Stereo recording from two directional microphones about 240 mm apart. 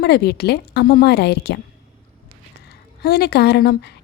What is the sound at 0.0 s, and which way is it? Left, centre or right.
A woman's voice, left.